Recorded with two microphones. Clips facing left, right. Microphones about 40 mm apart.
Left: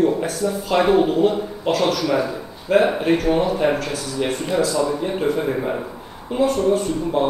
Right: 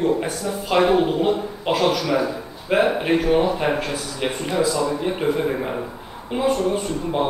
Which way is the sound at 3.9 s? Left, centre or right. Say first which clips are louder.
Left 2 dB; centre.